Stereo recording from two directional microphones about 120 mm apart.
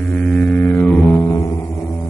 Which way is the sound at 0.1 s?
5° left (ahead or behind).